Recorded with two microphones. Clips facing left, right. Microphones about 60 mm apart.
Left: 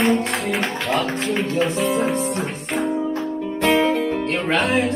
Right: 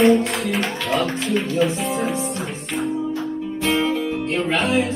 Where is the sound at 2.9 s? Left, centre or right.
Left.